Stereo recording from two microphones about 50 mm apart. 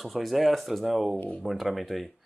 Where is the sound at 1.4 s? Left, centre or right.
Centre.